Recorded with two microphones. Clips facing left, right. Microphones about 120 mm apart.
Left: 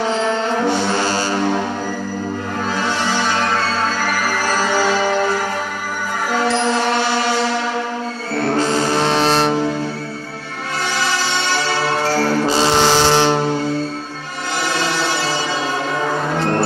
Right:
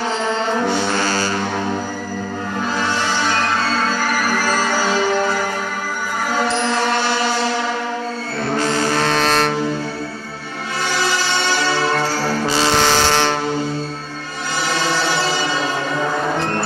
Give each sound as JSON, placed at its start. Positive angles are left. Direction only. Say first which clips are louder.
{"t": 8.5, "sound": "music", "louder": "even", "side_deg": 25}
{"t": 12.4, "sound": "music", "louder": "even", "side_deg": 20}